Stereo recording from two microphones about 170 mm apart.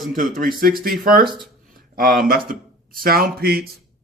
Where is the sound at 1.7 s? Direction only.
55° right (ahead or behind).